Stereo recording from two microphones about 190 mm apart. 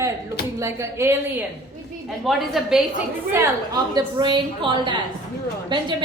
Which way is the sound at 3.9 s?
25° right (ahead or behind).